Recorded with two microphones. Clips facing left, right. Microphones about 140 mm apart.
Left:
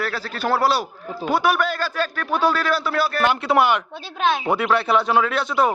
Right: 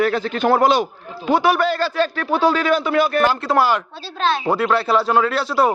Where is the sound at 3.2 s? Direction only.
Centre (ahead or behind).